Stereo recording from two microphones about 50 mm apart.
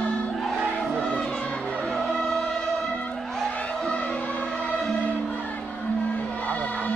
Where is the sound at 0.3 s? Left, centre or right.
Centre.